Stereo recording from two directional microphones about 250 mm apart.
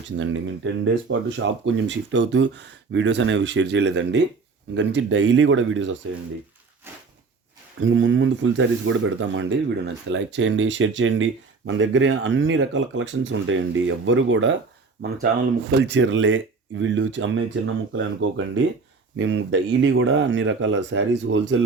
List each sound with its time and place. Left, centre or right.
0.2 s speech: right
7.8 s speech: right